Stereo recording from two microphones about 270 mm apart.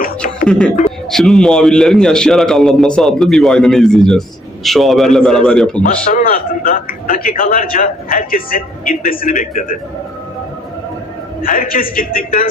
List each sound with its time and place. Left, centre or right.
1.1 s a man's voice: centre
5.8 s a man's voice: left
11.4 s a man's voice: left